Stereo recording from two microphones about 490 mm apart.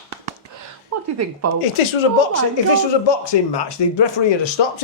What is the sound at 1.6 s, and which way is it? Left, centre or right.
Speech, left.